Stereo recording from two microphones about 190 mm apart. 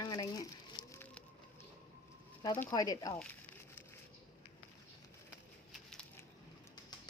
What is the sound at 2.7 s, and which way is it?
Speech, 20° left (ahead or behind).